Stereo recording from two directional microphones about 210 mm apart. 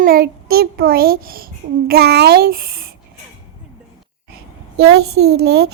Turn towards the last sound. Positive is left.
turn(degrees=-50)  # may be behind; listen again after turning